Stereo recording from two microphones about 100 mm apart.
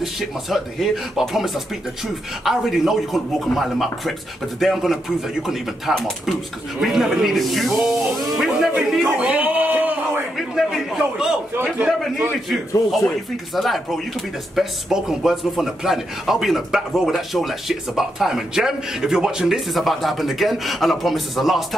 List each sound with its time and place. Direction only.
0.0 s speech: centre (ahead or behind)
9.0 s a sound: 15° right (ahead or behind)
10.3 s speech: centre (ahead or behind)
13.6 s speech: centre (ahead or behind)